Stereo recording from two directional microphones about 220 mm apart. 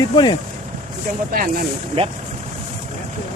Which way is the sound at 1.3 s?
40° right (ahead or behind).